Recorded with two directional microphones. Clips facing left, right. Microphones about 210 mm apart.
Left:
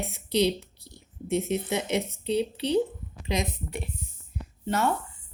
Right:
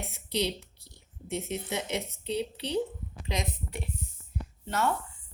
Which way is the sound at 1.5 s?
15° left (ahead or behind).